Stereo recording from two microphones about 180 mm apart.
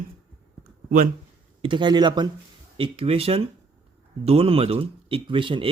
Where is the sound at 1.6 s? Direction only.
25° right (ahead or behind).